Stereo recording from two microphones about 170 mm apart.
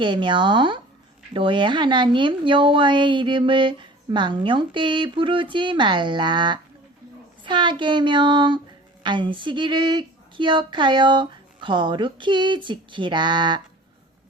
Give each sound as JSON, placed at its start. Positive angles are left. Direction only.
{"t": 0.0, "sound": "a woman's voice", "side_deg": -30}